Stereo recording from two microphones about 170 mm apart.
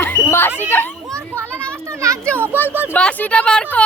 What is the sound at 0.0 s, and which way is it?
Screaming, 15° left (ahead or behind).